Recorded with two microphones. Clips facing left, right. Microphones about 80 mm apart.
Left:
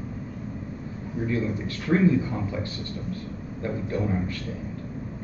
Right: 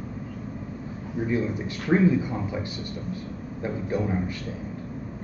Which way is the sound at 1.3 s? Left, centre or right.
Centre.